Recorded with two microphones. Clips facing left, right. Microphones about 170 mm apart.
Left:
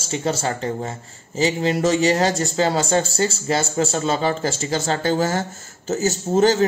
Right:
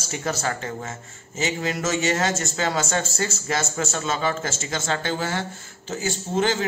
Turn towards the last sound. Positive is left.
turn(degrees=40)  # may be behind; listen again after turning